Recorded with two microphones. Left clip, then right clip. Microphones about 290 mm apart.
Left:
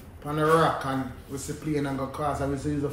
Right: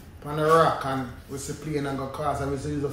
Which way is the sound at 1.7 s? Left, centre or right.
Centre.